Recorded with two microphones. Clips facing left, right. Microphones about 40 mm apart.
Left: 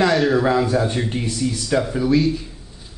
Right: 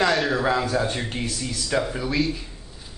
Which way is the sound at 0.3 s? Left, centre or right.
Centre.